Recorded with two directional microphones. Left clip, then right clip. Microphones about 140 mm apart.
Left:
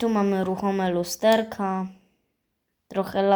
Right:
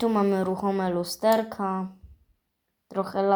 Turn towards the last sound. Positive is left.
turn(degrees=25)  # may be behind; listen again after turning